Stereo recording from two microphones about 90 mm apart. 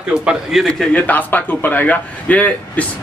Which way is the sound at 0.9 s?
20° left (ahead or behind).